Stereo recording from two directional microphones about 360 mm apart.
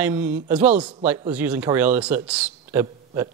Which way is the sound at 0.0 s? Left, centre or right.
Centre.